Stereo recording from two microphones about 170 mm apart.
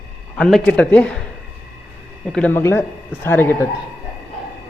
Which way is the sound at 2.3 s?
10° left (ahead or behind).